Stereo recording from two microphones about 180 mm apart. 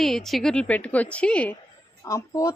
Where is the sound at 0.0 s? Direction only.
Centre (ahead or behind).